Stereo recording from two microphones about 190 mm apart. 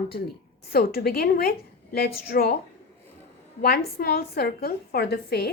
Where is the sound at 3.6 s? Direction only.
55° left (ahead or behind).